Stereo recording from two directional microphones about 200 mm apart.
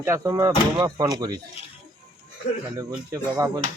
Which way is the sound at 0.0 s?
15° right (ahead or behind).